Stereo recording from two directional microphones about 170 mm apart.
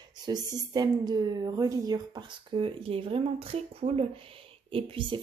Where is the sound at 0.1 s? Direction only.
25° right (ahead or behind).